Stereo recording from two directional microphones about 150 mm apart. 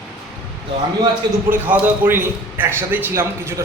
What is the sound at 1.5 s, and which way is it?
A man's voice, 10° right (ahead or behind).